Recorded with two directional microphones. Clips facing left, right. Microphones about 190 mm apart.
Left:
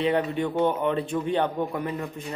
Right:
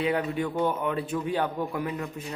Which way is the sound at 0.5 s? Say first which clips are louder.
Left 3 dB; 20° left (ahead or behind).